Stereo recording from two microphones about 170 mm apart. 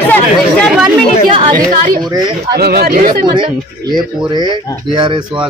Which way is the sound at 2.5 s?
65° right (ahead or behind).